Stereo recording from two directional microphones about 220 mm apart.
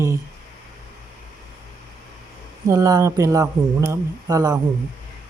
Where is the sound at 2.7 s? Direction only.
15° right (ahead or behind).